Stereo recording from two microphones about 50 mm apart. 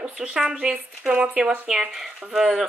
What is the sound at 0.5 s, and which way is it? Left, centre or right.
Speech, right.